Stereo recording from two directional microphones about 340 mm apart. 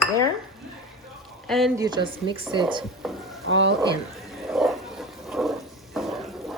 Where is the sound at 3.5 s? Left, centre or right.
Right.